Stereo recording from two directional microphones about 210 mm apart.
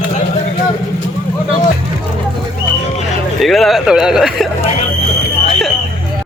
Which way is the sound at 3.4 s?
Centre (ahead or behind).